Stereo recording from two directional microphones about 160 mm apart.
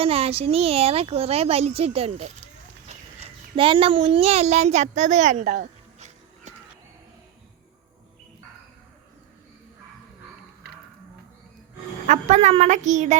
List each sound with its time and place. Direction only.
0.0 s a child's voice: 40° right (ahead or behind)
5.6 s music: 45° right (ahead or behind)
12.0 s a woman's voice: 50° right (ahead or behind)